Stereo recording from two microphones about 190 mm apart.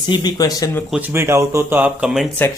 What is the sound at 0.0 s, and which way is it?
Speech, 25° left (ahead or behind).